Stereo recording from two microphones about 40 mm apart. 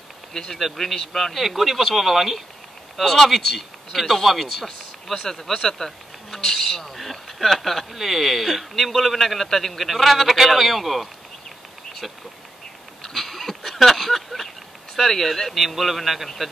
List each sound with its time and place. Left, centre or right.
0.3 s a man's voice: centre
5.2 s a man's voice: centre
13.0 s a sound: centre
15.0 s a man's voice: centre